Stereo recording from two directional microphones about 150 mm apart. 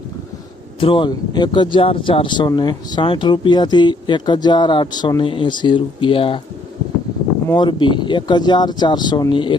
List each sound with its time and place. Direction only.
0.8 s speech: 35° left (ahead or behind)
7.4 s speech: 30° left (ahead or behind)